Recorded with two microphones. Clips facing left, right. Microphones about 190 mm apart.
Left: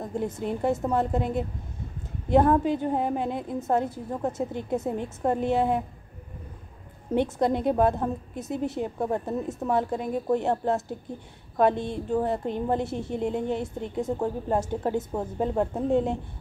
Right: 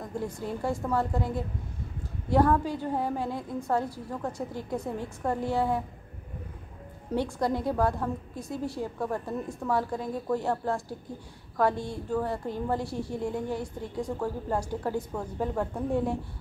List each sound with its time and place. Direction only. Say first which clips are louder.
0.0 s a woman's voice: left 4 dB; 20° left (ahead or behind)
7.2 s a woman's voice: left 4 dB; 20° left (ahead or behind)